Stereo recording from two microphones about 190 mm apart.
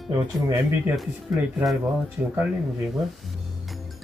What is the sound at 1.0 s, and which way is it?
Speech, centre (ahead or behind).